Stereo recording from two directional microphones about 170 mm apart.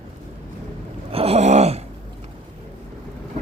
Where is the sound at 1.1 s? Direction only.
35° right (ahead or behind).